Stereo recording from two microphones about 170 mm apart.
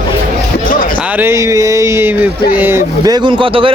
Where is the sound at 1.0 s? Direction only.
10° right (ahead or behind).